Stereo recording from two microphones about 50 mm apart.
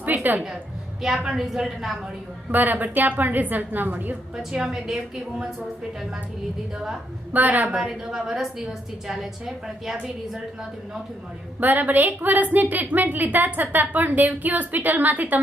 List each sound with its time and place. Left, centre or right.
0.0 s a sound: right
0.3 s a woman's voice: centre
2.5 s a woman's voice: right
4.4 s a woman's voice: centre
7.3 s a woman's voice: right
7.7 s a woman's voice: centre
11.6 s a woman's voice: right